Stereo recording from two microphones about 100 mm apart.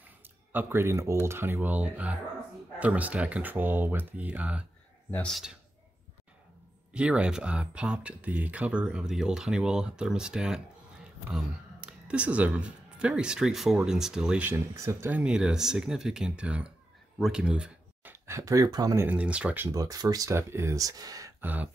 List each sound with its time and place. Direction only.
0.5 s a man's voice: 20° right (ahead or behind)
6.9 s speech: 10° right (ahead or behind)
14.5 s speech: 25° right (ahead or behind); by 18.1 s 10° right (ahead or behind)
18.2 s speech: 30° right (ahead or behind)
18.9 s speech: 15° right (ahead or behind)
19.7 s speech: 35° right (ahead or behind)
21.4 s speech: 15° right (ahead or behind)